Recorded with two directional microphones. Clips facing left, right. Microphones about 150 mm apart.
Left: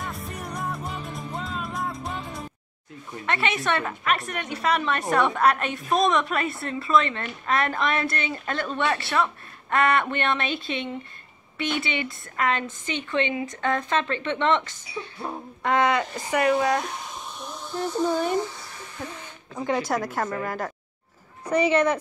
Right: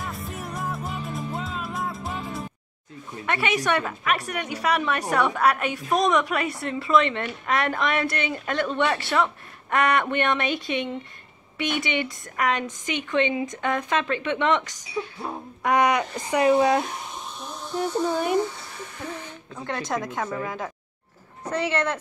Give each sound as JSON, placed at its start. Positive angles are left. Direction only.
{"t": 0.0, "sound": "music", "side_deg": 0}
{"t": 3.3, "sound": "speech", "side_deg": -10}
{"t": 17.7, "sound": "speech", "side_deg": -10}
{"t": 19.5, "sound": "a woman's voice", "side_deg": 10}
{"t": 21.5, "sound": "speech", "side_deg": 15}